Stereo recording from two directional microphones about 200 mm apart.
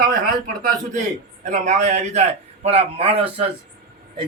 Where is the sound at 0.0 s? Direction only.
45° right (ahead or behind).